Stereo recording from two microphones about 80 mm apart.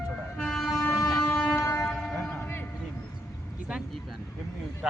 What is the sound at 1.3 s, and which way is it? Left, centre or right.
Train, centre.